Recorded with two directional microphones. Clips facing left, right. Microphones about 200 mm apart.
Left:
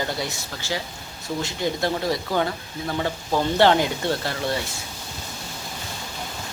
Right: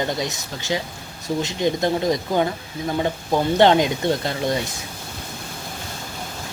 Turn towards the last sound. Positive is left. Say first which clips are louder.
# right 3 dB
turn(degrees=-20)  # may be behind; listen again after turning